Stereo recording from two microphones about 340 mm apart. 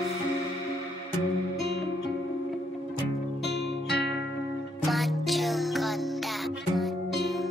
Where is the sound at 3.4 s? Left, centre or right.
Left.